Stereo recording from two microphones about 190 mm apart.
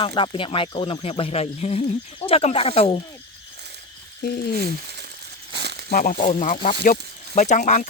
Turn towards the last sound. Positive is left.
turn(degrees=45)  # may be behind; listen again after turning